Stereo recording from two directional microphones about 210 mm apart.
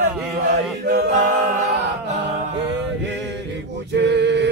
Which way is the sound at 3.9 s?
55° right (ahead or behind).